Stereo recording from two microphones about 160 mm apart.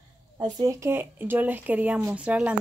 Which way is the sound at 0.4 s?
20° right (ahead or behind).